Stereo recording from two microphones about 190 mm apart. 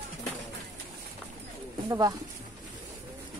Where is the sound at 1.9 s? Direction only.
20° right (ahead or behind).